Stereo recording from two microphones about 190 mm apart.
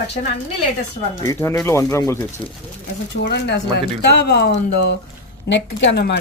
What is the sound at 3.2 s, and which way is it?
Speech, 65° left (ahead or behind).